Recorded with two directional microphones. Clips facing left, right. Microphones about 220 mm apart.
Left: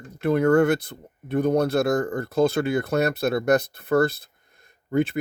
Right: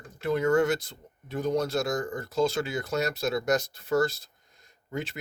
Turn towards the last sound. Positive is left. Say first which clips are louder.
# left 12 dB
turn(degrees=55)  # may be behind; listen again after turning